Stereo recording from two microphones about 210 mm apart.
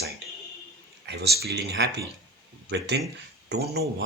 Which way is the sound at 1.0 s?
55° right (ahead or behind).